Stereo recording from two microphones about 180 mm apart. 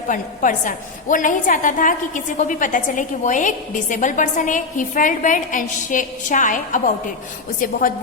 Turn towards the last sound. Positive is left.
turn(degrees=50)  # may be behind; listen again after turning